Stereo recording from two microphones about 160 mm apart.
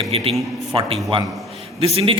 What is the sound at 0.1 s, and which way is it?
Speech, 35° right (ahead or behind).